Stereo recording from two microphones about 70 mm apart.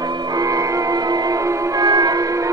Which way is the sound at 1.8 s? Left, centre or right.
Right.